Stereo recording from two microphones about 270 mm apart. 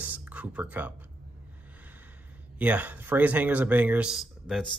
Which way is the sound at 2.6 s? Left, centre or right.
Centre.